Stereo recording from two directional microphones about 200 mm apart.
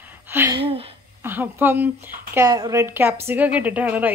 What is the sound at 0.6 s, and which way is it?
Speech, 30° right (ahead or behind).